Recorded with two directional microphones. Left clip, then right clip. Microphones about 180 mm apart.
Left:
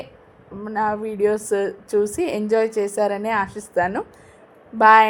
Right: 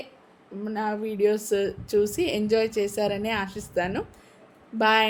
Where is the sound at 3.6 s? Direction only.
15° right (ahead or behind).